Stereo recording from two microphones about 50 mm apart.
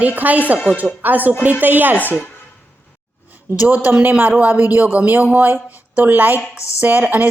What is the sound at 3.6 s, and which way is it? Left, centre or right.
A woman's voice, right.